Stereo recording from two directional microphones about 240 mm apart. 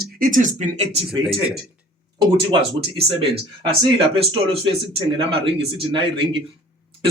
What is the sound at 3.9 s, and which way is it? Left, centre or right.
Speech, right.